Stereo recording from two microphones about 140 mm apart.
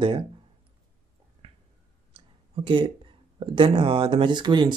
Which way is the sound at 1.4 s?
40° right (ahead or behind).